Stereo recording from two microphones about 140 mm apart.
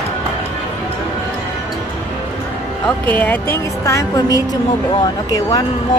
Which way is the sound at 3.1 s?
10° left (ahead or behind).